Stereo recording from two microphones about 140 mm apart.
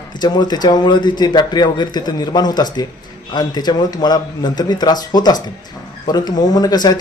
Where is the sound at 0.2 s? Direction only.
30° left (ahead or behind).